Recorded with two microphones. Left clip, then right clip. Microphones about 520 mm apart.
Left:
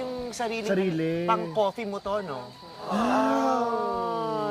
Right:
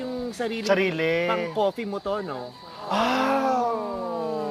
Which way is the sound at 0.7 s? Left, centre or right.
Right.